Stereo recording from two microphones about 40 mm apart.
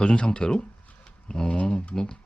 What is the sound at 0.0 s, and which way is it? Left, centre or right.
Speech, left.